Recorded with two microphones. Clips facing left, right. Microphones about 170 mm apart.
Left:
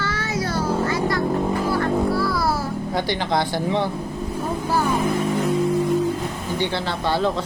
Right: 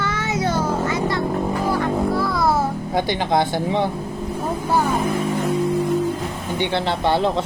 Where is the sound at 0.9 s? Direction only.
25° right (ahead or behind).